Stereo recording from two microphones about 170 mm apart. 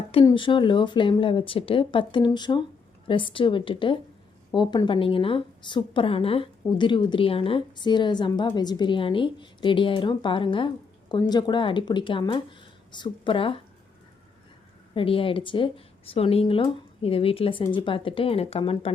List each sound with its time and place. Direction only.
0.3 s a woman's voice: 30° left (ahead or behind)
14.9 s speech: 30° left (ahead or behind)